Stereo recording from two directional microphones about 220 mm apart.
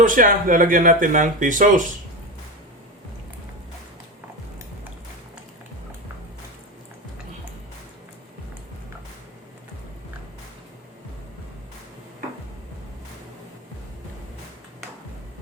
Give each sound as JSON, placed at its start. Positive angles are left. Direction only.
{"t": 0.0, "sound": "speech", "side_deg": -35}